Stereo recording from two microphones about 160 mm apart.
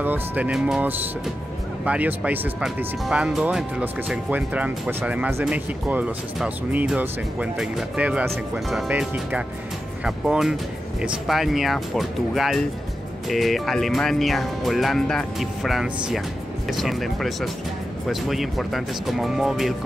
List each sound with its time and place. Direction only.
0.0 s speech: 10° right (ahead or behind)